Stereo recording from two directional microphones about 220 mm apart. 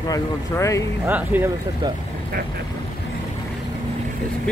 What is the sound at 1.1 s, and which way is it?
Speech, 10° right (ahead or behind).